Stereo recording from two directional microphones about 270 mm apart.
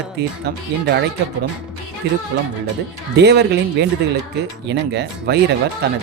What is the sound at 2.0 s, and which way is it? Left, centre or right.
Speech, right.